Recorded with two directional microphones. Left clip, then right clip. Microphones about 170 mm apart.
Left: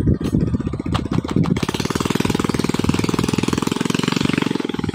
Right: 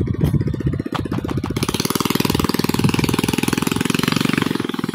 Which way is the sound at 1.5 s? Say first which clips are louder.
Right 1 dB; 45° right (ahead or behind).